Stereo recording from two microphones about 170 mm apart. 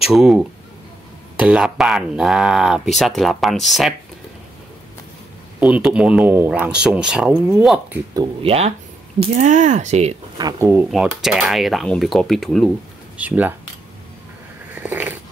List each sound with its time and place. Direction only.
0.0 s speech: centre (ahead or behind)
5.6 s speech: 5° right (ahead or behind)
8.1 s speech: 30° right (ahead or behind)
9.2 s speech: 45° right (ahead or behind)
10.3 s speech: 20° right (ahead or behind)
10.9 s speech: centre (ahead or behind)
13.2 s speech: 10° right (ahead or behind)
14.8 s a sound: 10° right (ahead or behind)